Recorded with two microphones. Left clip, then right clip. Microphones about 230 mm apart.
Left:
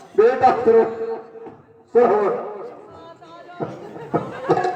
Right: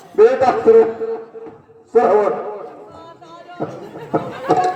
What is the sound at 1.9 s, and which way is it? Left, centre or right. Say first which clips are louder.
Speech: right 2 dB; right.